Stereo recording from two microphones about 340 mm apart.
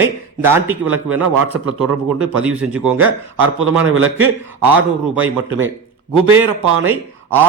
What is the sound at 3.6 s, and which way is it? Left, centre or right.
Speech, right.